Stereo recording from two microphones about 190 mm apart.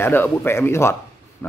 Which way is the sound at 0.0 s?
10° left (ahead or behind).